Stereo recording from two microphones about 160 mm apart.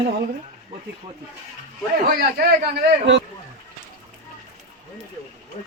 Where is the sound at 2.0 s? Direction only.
75° right (ahead or behind).